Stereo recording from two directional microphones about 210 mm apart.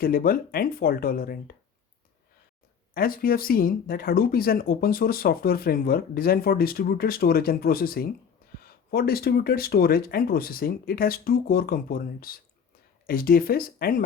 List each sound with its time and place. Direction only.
0.0 s speech: 45° left (ahead or behind)
2.9 s speech: 45° left (ahead or behind)